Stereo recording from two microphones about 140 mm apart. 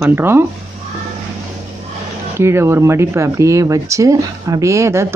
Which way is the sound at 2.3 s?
20° right (ahead or behind).